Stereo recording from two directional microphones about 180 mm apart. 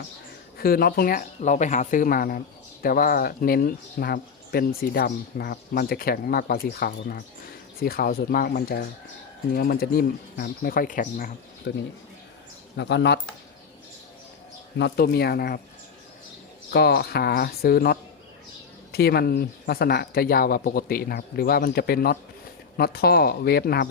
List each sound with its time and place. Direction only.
0.6 s speech: 55° left (ahead or behind)
11.7 s speech: 65° left (ahead or behind)
12.7 s speech: 80° left
14.8 s speech: 65° left (ahead or behind)
16.7 s speech: 65° left (ahead or behind)